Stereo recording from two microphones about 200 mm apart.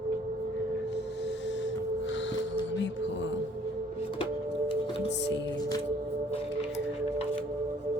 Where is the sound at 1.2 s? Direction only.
65° left (ahead or behind).